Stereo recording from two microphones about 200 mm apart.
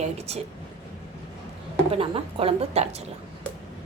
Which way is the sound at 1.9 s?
30° right (ahead or behind).